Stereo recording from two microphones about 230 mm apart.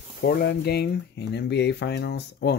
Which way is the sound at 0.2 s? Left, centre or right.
Left.